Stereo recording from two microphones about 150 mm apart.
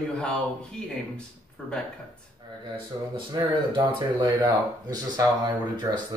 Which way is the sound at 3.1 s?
30° right (ahead or behind).